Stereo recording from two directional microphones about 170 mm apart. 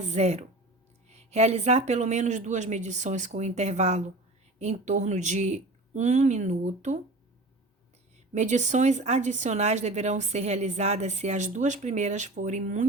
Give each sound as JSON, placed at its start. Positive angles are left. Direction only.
{"t": 0.0, "sound": "a woman's voice", "side_deg": -40}
{"t": 8.3, "sound": "a woman's voice", "side_deg": -45}